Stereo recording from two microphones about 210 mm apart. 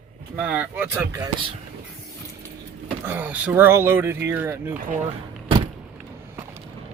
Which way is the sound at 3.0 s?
10° right (ahead or behind).